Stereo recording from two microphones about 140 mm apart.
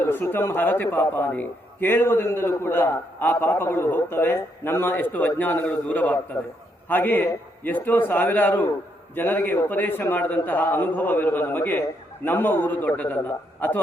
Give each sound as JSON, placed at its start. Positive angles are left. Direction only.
{"t": 0.0, "sound": "a man's voice", "side_deg": 15}